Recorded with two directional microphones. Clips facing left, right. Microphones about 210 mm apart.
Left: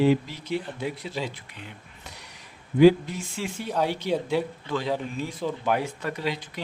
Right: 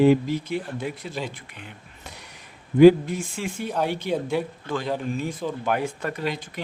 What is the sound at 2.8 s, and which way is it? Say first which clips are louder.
Speech: right 4 dB; 50° right (ahead or behind).